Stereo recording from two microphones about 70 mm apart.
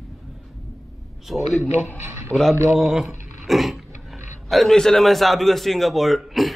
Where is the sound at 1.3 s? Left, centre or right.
Centre.